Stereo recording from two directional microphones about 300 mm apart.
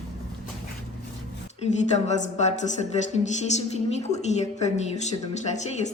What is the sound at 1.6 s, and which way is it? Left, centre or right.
A woman's voice, left.